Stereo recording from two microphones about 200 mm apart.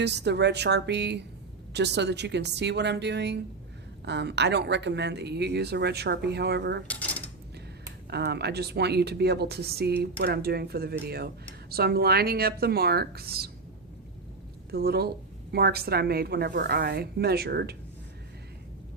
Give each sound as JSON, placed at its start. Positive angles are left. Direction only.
{"t": 0.0, "sound": "speech", "side_deg": -60}
{"t": 6.8, "sound": "drawer open or close", "side_deg": 5}
{"t": 8.1, "sound": "a woman's voice", "side_deg": -55}
{"t": 14.7, "sound": "a woman's voice", "side_deg": -50}